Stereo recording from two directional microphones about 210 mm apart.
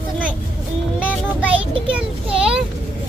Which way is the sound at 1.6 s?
25° right (ahead or behind).